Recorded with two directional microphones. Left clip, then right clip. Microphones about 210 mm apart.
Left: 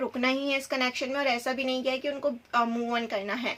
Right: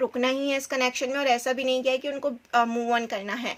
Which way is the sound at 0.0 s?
45° right (ahead or behind).